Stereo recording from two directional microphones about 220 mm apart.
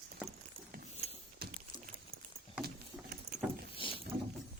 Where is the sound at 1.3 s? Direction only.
45° right (ahead or behind).